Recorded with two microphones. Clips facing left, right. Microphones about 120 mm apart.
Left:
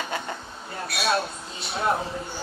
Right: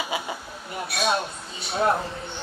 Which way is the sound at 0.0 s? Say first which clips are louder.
Right 1 dB; 10° right (ahead or behind).